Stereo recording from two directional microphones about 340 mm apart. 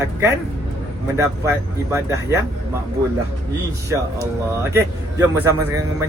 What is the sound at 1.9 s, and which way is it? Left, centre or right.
Speech, centre.